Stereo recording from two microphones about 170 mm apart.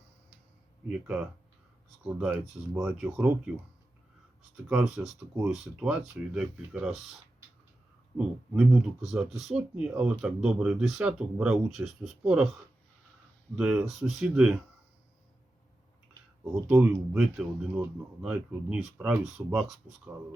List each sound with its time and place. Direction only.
0.9 s speech: 5° right (ahead or behind)
4.5 s speech: 5° right (ahead or behind)
8.5 s speech: 5° right (ahead or behind)
13.6 s speech: 5° right (ahead or behind)
16.6 s speech: 5° right (ahead or behind)